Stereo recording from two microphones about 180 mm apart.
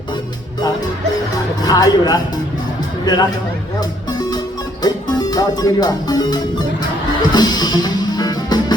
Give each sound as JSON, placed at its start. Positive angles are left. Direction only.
{"t": 1.6, "sound": "speech", "side_deg": 20}
{"t": 3.8, "sound": "music", "side_deg": 20}
{"t": 4.8, "sound": "speech", "side_deg": 20}
{"t": 7.3, "sound": "music", "side_deg": 20}